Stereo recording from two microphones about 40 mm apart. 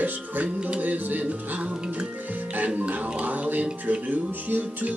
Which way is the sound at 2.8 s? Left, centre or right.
Right.